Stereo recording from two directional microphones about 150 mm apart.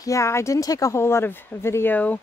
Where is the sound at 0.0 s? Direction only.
20° left (ahead or behind).